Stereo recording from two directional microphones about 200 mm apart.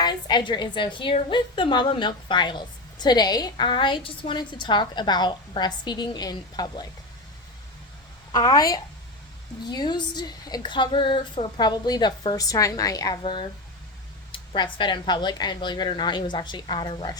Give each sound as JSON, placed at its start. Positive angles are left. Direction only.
{"t": 0.0, "sound": "a woman's voice", "side_deg": 20}
{"t": 8.3, "sound": "a woman's voice", "side_deg": 20}